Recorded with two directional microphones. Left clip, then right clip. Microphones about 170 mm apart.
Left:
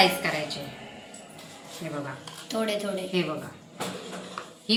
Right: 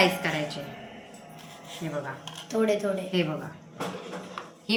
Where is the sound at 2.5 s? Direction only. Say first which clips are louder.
Right 3 dB; 25° right (ahead or behind).